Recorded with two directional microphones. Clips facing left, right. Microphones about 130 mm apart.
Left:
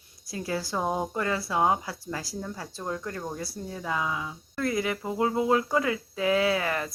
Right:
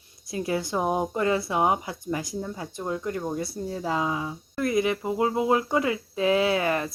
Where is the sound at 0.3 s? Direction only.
20° right (ahead or behind).